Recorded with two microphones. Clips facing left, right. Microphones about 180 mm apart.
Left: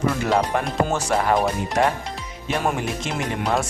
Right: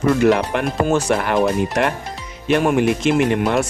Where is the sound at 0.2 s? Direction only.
65° right (ahead or behind).